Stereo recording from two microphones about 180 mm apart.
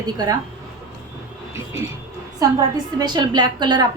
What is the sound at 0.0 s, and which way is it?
Speech, 20° right (ahead or behind).